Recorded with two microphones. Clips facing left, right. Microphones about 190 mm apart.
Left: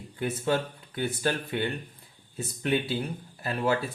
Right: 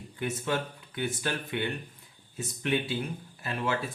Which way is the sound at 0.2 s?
35° left (ahead or behind).